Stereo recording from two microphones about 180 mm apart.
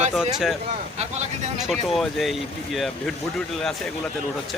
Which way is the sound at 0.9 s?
40° right (ahead or behind).